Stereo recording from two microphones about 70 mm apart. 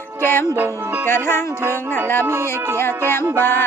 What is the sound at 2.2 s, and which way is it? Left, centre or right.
Speech, right.